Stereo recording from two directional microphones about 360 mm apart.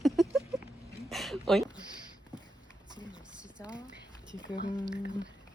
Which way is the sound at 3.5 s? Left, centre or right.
Centre.